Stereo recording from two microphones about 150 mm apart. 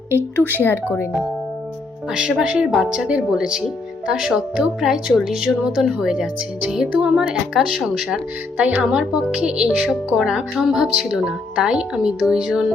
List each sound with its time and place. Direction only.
0.1 s speech: 15° right (ahead or behind)
0.6 s speech: 15° left (ahead or behind)
2.1 s speech: 5° right (ahead or behind)